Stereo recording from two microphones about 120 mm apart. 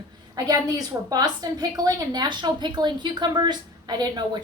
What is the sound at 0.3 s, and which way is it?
A woman's voice, 30° right (ahead or behind).